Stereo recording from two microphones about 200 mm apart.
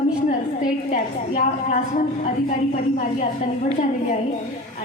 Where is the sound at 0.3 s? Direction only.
40° left (ahead or behind).